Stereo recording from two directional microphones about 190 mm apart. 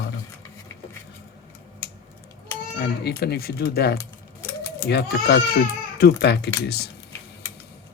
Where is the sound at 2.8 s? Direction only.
60° left (ahead or behind).